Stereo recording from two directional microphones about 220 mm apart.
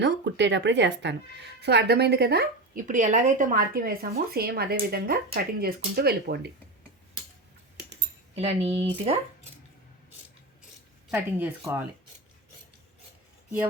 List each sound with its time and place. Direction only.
0.0 s speech: 50° right (ahead or behind)
8.4 s speech: 25° right (ahead or behind)
11.1 s speech: 10° right (ahead or behind)